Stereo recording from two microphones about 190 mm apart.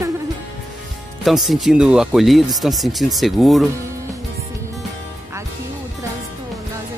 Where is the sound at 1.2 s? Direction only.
Centre (ahead or behind).